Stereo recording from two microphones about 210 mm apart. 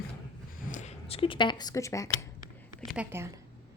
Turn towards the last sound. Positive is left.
turn(degrees=-10)  # may be behind; listen again after turning